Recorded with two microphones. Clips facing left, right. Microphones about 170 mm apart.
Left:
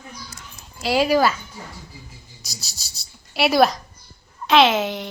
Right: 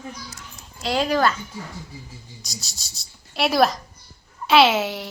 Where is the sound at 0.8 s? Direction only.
5° left (ahead or behind).